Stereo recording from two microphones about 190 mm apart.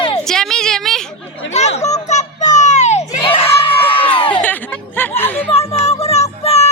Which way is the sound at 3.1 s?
25° left (ahead or behind).